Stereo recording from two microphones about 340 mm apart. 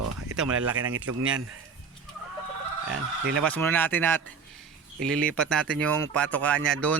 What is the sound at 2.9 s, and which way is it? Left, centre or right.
Speech, right.